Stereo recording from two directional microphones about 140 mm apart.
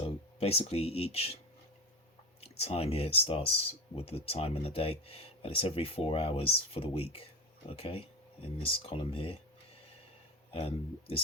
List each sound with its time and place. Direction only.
0.0 s speech: 45° left (ahead or behind)
2.4 s speech: 45° left (ahead or behind)
10.5 s speech: 45° left (ahead or behind)